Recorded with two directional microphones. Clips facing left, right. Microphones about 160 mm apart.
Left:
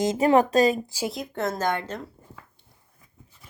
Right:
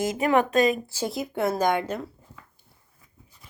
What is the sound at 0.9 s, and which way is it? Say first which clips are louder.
Speech: even; 10° left (ahead or behind).